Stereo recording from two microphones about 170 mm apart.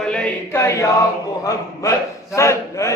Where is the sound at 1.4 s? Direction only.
20° left (ahead or behind).